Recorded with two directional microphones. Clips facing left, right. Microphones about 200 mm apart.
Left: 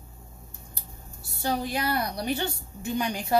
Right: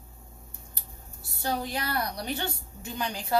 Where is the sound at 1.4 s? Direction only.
10° left (ahead or behind).